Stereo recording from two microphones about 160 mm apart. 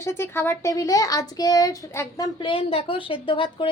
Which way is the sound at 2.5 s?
35° left (ahead or behind).